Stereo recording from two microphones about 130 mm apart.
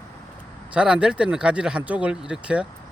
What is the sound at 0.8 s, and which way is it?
Speech, 5° right (ahead or behind).